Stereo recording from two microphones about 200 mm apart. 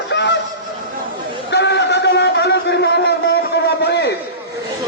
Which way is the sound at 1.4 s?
60° left (ahead or behind).